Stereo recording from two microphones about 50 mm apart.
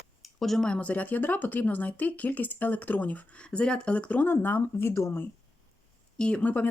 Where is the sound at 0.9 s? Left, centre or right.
Left.